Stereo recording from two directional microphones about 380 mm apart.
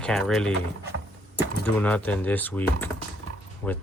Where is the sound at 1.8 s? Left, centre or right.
Centre.